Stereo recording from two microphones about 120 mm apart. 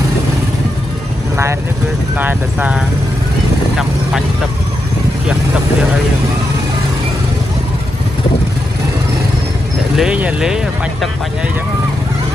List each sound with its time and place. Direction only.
2.1 s speech: 15° right (ahead or behind)
9.9 s speech: 10° right (ahead or behind)